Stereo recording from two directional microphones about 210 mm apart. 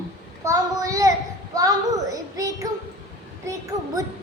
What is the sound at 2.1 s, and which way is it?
Speech, 15° right (ahead or behind).